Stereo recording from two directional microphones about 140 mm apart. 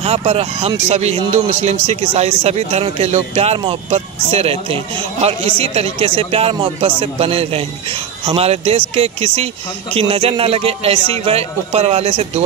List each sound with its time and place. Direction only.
0.0 s speech: 45° right (ahead or behind)